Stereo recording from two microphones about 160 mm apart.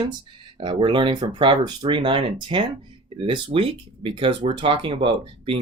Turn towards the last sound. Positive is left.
turn(degrees=-35)  # may be behind; listen again after turning